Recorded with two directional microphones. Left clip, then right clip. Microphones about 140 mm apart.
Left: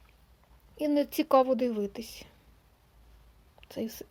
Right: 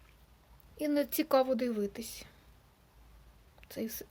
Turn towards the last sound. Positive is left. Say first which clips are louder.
# left 3 dB
turn(degrees=35)  # may be behind; listen again after turning